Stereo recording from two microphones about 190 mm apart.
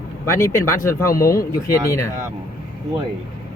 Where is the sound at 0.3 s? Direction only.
15° left (ahead or behind).